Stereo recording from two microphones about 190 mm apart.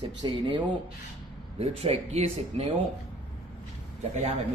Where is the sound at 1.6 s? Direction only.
30° right (ahead or behind).